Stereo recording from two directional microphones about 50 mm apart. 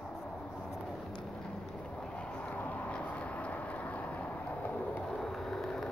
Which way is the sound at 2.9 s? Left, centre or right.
Left.